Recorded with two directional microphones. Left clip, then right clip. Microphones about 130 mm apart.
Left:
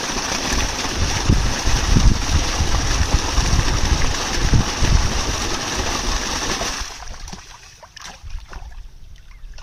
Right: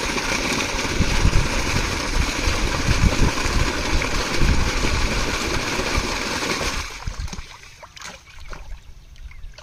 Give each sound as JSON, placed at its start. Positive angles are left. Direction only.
{"t": 0.0, "sound": "vehicle", "side_deg": -25}